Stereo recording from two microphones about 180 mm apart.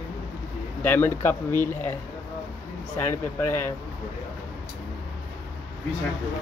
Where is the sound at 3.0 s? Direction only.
10° left (ahead or behind).